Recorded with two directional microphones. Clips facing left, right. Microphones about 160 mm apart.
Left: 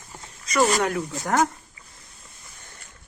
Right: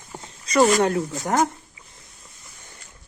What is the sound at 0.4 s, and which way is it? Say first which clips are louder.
Speech: right 4 dB; 35° right (ahead or behind).